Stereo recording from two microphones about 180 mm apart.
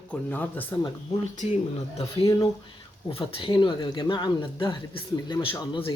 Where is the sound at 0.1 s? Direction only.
10° left (ahead or behind).